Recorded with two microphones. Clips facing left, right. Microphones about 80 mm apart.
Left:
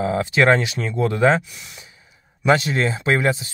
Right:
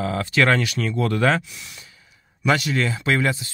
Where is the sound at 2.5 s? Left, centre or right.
Left.